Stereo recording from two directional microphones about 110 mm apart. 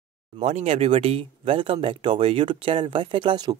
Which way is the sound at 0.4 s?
85° right.